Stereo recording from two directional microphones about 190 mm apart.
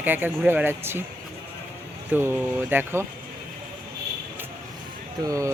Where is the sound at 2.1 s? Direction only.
10° right (ahead or behind).